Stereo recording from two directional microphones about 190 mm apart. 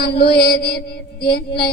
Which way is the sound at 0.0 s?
55° left (ahead or behind).